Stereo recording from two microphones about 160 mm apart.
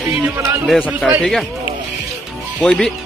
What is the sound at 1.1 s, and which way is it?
Speech, centre (ahead or behind).